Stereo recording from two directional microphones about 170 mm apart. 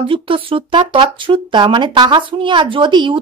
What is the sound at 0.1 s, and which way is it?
Speech, 30° right (ahead or behind).